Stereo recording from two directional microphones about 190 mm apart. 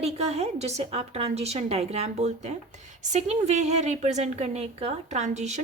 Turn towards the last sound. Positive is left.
turn(degrees=-35)  # may be behind; listen again after turning